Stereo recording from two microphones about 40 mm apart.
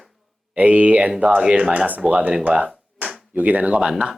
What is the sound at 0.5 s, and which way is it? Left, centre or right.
Speech, right.